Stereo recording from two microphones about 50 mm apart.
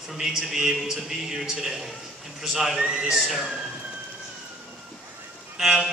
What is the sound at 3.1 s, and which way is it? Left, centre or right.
Speech, centre.